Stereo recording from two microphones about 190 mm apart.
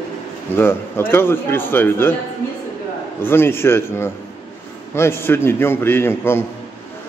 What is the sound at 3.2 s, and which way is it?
A man's voice, 10° left (ahead or behind).